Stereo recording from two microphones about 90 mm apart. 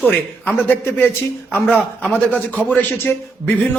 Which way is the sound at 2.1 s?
20° left (ahead or behind).